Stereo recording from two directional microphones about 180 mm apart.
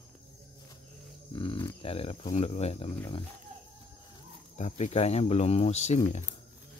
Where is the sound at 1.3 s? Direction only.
30° left (ahead or behind).